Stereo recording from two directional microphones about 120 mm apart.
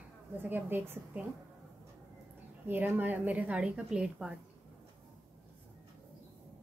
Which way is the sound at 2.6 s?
15° right (ahead or behind).